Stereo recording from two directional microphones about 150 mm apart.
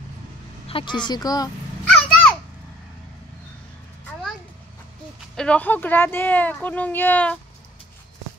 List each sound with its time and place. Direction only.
0.7 s a woman's voice: 35° left (ahead or behind)
2.0 s children playing: 5° left (ahead or behind)
5.3 s speech: 5° left (ahead or behind)